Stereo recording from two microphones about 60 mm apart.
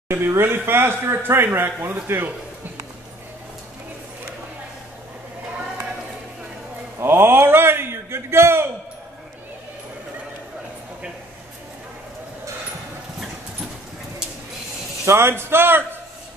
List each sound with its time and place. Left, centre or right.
0.1 s speech: right
7.0 s a man's voice: right
15.0 s speech: right